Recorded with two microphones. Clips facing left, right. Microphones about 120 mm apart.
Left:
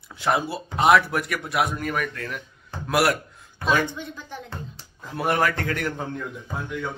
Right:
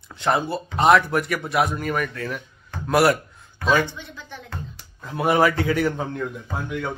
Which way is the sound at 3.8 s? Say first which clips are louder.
Left 4 dB; 45° left (ahead or behind).